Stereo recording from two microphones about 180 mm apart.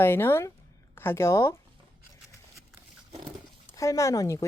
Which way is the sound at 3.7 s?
15° left (ahead or behind).